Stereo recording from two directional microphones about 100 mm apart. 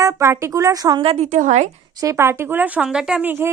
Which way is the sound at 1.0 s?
80° right.